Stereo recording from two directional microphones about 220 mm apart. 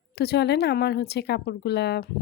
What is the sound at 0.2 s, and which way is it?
Speech, 50° left (ahead or behind).